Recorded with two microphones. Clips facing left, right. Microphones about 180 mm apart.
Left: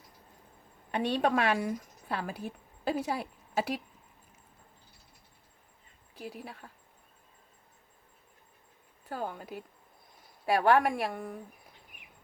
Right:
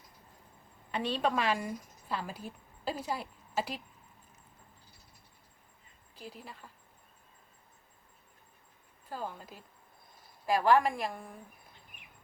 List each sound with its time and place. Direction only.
0.9 s a woman's voice: 55° left (ahead or behind)
6.1 s a woman's voice: 60° left (ahead or behind)
9.0 s a woman's voice: 60° left (ahead or behind)